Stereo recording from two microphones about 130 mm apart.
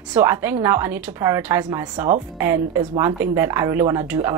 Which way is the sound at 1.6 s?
35° right (ahead or behind).